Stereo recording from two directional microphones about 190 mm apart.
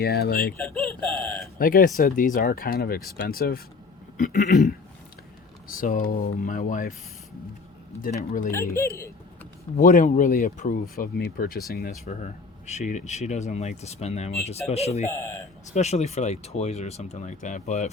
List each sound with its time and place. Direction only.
0.0 s speech: 55° left (ahead or behind)
0.6 s a sound: centre (ahead or behind)
1.5 s speech: 50° left (ahead or behind)
5.7 s speech: 45° left (ahead or behind)
8.3 s speech: 45° left (ahead or behind)
9.7 s speech: 45° left (ahead or behind)
12.0 s speech: 35° left (ahead or behind)
15.1 s speech: 15° left (ahead or behind)
15.7 s speech: 35° left (ahead or behind)